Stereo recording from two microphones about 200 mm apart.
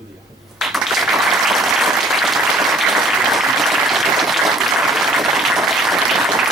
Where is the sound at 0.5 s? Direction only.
Centre (ahead or behind).